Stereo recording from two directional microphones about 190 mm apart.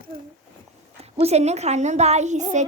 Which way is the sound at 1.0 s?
35° right (ahead or behind).